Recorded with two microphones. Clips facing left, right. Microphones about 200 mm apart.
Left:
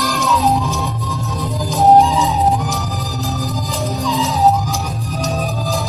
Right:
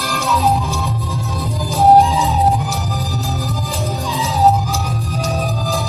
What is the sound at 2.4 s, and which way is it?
Music, 15° left (ahead or behind).